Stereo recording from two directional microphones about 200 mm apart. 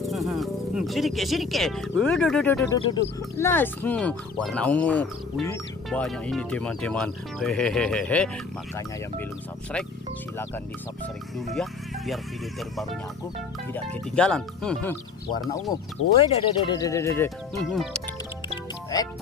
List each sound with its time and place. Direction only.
0.0 s speech: centre (ahead or behind)
3.0 s speech: 60° left (ahead or behind)
3.3 s speech: 10° left (ahead or behind)
11.3 s speech: centre (ahead or behind)
14.1 s speech: 5° left (ahead or behind)
15.7 s speech: 25° left (ahead or behind)
17.6 s speech: centre (ahead or behind)
18.9 s speech: 20° left (ahead or behind)